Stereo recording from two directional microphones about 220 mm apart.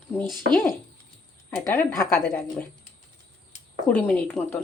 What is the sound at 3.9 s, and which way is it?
Speech, 5° left (ahead or behind).